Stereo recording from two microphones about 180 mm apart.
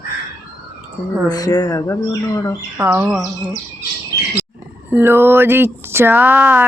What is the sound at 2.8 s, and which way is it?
Speech, 10° right (ahead or behind).